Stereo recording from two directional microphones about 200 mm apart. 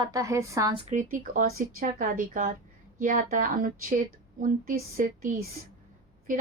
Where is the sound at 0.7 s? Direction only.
35° right (ahead or behind).